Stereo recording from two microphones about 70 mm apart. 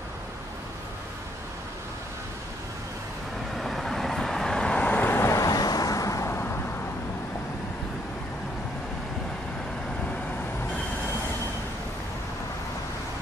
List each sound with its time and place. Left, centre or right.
3.5 s vehicle: centre; by 5.2 s left
5.2 s vehicle: left
6.2 s vehicle: left